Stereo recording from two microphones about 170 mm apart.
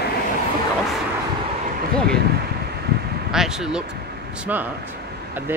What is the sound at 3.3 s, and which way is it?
Speech, 5° right (ahead or behind).